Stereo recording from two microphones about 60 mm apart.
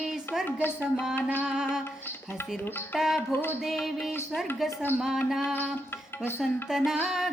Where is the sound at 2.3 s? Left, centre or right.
Left.